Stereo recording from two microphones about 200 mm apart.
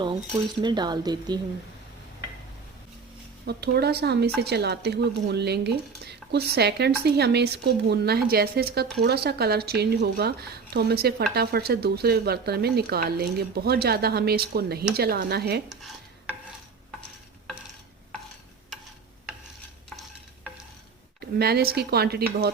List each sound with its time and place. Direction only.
0.6 s speech: 20° right (ahead or behind)
3.4 s a woman's voice: 55° right (ahead or behind)
21.2 s a woman's voice: 50° right (ahead or behind)